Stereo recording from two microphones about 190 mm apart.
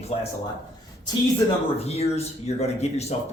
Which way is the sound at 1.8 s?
35° left (ahead or behind).